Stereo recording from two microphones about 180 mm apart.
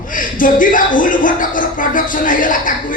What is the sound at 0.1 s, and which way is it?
Speech, 50° left (ahead or behind).